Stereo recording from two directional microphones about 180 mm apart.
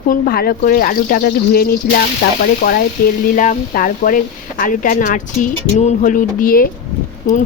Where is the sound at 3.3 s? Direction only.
45° left (ahead or behind).